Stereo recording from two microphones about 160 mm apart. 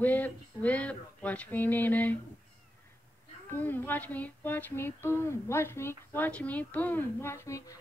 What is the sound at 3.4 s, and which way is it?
Humming, 10° left (ahead or behind).